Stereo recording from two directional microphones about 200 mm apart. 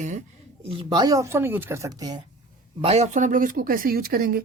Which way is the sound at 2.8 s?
35° right (ahead or behind).